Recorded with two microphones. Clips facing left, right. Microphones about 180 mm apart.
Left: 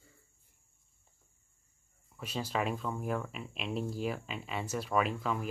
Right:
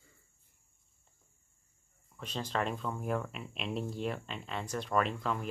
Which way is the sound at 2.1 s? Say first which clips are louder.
Left 1 dB; 5° left (ahead or behind).